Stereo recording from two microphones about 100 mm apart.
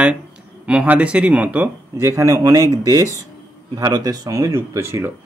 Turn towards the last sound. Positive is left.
turn(degrees=-25)  # may be behind; listen again after turning